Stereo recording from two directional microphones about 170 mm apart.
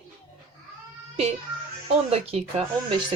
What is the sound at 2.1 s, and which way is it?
Speech, 35° right (ahead or behind).